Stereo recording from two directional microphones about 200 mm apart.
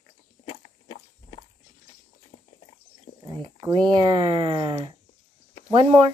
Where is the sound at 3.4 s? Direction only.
25° right (ahead or behind).